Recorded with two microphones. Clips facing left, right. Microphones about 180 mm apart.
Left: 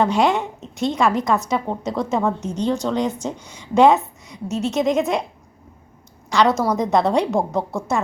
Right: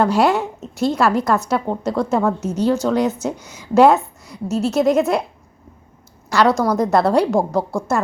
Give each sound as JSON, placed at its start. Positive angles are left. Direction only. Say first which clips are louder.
{"t": 0.0, "sound": "a woman's voice", "louder": "right 2 dB", "side_deg": 0}
{"t": 6.3, "sound": "a woman's voice", "louder": "right 2 dB", "side_deg": 0}